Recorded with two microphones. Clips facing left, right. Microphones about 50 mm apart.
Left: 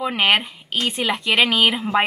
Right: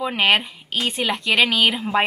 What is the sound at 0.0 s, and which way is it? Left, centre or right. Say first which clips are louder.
Speech: even; centre.